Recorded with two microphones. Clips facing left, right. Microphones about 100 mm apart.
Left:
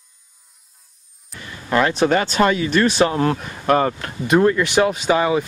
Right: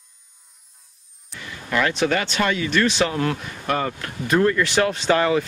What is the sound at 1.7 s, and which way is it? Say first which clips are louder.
Speech: left 4 dB; 30° left (ahead or behind).